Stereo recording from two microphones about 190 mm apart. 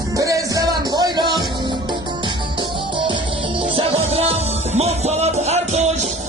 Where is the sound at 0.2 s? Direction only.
15° right (ahead or behind).